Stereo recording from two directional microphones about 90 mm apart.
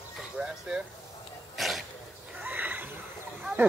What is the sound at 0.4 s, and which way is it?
Speech, 10° right (ahead or behind).